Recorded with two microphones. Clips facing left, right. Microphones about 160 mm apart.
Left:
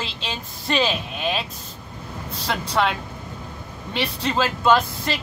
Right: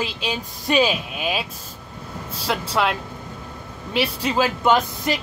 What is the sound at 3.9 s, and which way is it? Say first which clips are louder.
Speech: right 2 dB; 10° right (ahead or behind).